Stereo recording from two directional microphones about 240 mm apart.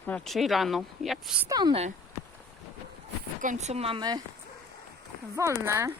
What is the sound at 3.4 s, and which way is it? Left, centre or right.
Speech, right.